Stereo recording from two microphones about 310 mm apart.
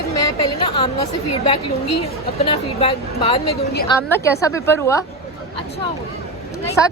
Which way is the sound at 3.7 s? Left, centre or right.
Left.